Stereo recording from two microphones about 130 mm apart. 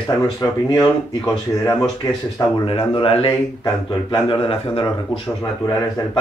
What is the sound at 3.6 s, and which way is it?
Speech, 35° left (ahead or behind).